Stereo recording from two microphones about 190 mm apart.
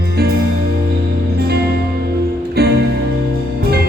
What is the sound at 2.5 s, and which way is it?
Music, 60° right (ahead or behind).